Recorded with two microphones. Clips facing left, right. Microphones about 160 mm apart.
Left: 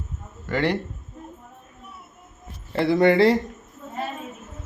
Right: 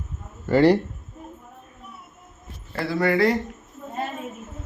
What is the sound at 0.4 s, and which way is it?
Speech, 35° right (ahead or behind).